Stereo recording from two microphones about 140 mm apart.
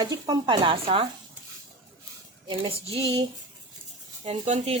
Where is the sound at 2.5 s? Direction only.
40° right (ahead or behind).